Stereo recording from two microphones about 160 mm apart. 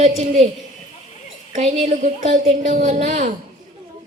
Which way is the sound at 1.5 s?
45° right (ahead or behind).